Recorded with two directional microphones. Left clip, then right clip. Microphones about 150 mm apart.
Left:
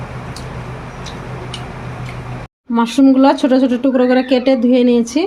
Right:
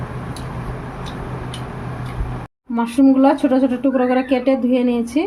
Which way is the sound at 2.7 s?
45° left (ahead or behind).